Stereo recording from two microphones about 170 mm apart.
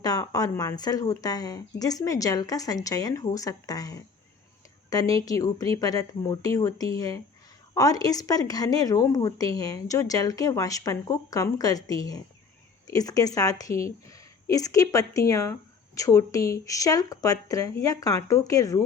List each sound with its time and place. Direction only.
0.0 s a woman's voice: 20° left (ahead or behind)